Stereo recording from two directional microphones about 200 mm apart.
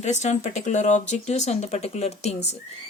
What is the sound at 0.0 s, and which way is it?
Speech, 35° left (ahead or behind).